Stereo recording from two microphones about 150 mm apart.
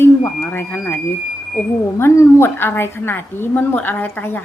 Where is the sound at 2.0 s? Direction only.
20° left (ahead or behind).